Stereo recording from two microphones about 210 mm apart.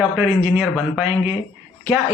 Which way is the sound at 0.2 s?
Centre (ahead or behind).